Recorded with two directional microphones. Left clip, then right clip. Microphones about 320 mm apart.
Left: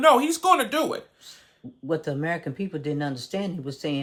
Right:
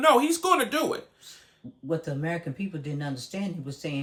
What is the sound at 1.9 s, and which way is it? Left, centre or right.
Speech, left.